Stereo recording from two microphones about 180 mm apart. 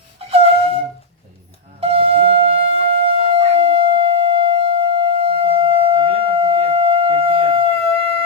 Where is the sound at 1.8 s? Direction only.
30° right (ahead or behind).